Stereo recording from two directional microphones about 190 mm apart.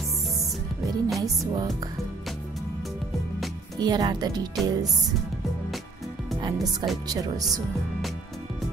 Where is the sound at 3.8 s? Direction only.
20° right (ahead or behind).